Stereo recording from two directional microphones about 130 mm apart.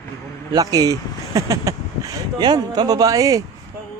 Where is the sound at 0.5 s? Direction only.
30° right (ahead or behind).